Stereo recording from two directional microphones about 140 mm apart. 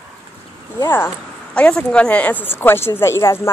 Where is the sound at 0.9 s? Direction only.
10° left (ahead or behind).